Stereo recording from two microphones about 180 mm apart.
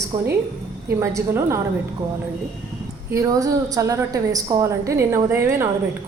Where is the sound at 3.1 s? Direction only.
20° right (ahead or behind).